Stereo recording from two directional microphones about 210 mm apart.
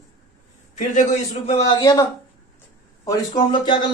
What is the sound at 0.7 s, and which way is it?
Speech, 35° left (ahead or behind).